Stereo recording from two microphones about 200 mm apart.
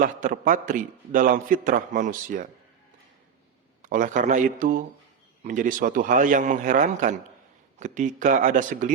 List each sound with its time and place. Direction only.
0.0 s a man's voice: 40° right (ahead or behind)
3.8 s a man's voice: 40° right (ahead or behind)